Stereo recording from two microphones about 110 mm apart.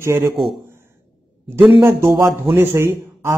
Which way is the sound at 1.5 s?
20° right (ahead or behind).